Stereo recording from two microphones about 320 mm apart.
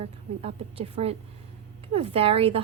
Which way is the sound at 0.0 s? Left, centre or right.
Centre.